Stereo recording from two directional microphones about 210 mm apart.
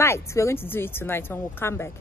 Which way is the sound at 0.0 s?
15° left (ahead or behind).